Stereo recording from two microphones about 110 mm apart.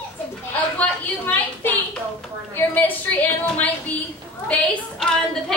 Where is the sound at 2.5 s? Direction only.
15° left (ahead or behind).